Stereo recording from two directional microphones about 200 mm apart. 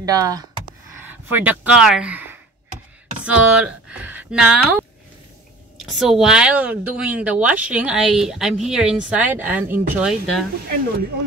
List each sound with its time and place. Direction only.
0.0 s speech: 20° right (ahead or behind)
5.9 s a woman's voice: centre (ahead or behind)